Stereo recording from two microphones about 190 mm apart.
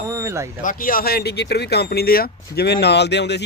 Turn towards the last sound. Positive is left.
turn(degrees=65)  # may be behind; listen again after turning